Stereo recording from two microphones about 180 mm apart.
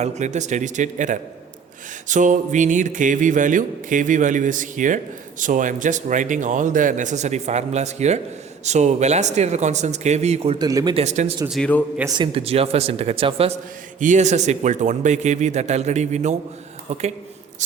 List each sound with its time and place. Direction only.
0.0 s a man's voice: 40° right (ahead or behind)
10.6 s speech: 20° right (ahead or behind)
10.9 s a man's voice: 40° right (ahead or behind)
11.4 s a man's voice: centre (ahead or behind)
12.0 s a man's voice: 25° right (ahead or behind)